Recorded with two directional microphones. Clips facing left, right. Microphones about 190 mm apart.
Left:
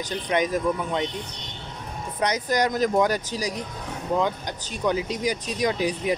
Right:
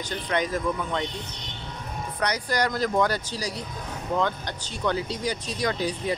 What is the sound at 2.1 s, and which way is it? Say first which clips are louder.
Speech: left 3 dB; 20° left (ahead or behind).